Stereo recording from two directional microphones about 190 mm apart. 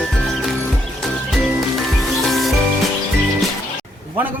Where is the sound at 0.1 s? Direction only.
Centre (ahead or behind).